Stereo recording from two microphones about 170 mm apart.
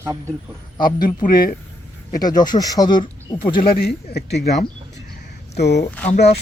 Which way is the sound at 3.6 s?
65° left (ahead or behind).